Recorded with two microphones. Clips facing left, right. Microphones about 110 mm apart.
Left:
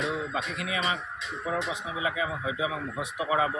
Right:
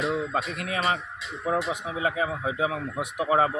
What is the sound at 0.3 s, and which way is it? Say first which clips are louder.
Speech: right 3 dB; 50° right (ahead or behind).